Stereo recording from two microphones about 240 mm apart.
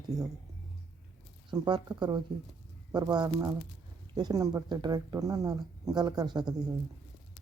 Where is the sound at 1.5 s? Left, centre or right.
Centre.